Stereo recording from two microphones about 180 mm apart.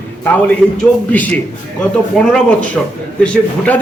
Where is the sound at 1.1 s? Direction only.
10° left (ahead or behind).